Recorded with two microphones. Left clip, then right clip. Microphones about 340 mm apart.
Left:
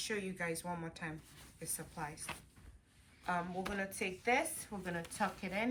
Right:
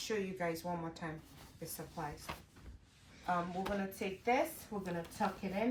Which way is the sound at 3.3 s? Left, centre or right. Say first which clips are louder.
Right 2 dB; centre.